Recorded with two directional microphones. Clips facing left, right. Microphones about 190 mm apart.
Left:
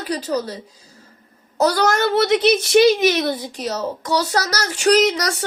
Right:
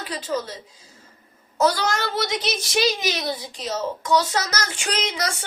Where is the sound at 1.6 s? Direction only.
40° left (ahead or behind).